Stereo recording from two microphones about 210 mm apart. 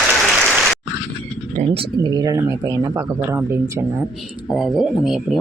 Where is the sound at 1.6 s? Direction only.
25° right (ahead or behind).